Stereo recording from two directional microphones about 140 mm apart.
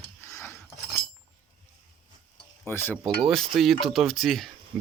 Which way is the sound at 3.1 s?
Centre (ahead or behind).